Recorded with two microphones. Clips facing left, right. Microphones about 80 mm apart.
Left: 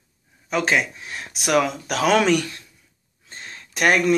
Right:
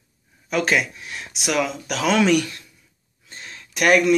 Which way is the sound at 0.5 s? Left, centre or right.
Left.